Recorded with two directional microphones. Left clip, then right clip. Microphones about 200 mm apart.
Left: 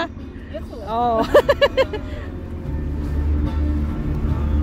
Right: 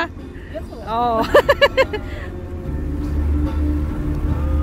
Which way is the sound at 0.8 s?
15° left (ahead or behind).